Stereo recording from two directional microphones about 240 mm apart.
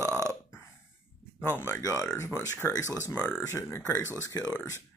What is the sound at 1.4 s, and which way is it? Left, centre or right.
Speech, centre.